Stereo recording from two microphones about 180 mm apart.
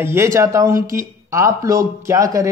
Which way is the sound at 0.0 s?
15° right (ahead or behind).